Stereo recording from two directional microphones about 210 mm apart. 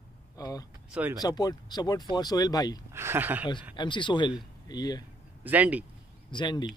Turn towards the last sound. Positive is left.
turn(degrees=20)  # may be behind; listen again after turning